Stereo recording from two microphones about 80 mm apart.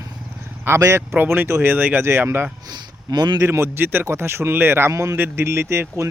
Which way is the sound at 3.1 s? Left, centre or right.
Right.